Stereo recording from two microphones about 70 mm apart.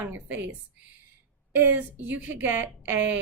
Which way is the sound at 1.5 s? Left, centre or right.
Right.